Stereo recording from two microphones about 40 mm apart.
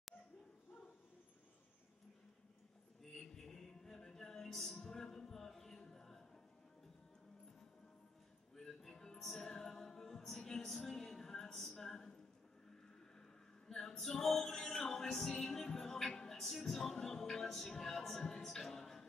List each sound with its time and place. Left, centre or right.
3.0 s a sound: centre
8.5 s music: centre
9.7 s a capella: centre
13.7 s music: centre